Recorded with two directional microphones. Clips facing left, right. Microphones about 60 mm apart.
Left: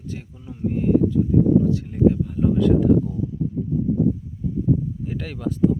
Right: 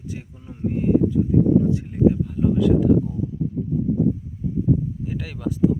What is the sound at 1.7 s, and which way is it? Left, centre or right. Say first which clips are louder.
Speech: even; right.